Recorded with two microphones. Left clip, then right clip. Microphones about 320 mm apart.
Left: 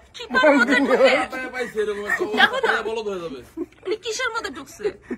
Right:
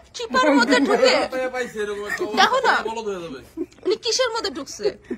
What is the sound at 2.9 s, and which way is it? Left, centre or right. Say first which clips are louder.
Speech: left 1 dB; right.